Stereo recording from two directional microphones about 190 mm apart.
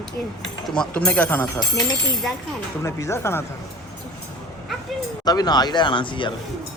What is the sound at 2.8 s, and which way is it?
Speech, 15° left (ahead or behind).